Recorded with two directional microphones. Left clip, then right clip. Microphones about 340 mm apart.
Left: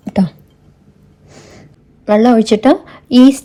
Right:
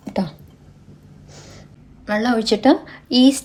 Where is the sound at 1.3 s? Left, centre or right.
Centre.